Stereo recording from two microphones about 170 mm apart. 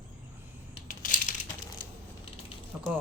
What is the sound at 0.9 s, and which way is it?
Crushing, 50° left (ahead or behind).